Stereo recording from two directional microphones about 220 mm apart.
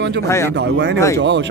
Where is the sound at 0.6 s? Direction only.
50° right (ahead or behind).